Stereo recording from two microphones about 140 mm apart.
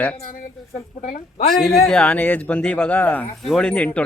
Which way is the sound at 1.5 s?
Centre (ahead or behind).